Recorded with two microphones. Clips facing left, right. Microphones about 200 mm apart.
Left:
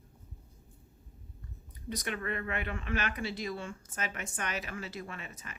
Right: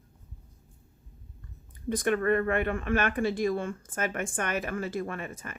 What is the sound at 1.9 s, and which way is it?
A woman's voice, 50° right (ahead or behind).